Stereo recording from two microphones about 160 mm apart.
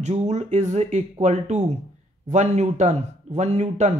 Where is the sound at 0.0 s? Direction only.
45° right (ahead or behind).